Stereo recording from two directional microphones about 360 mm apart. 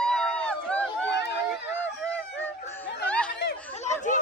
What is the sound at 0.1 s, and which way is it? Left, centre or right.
Run, centre.